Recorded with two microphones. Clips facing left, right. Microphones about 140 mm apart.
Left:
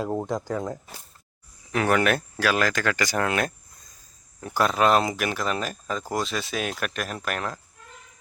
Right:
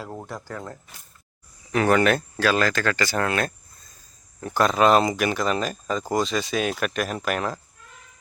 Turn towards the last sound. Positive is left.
turn(degrees=0)  # may be behind; listen again after turning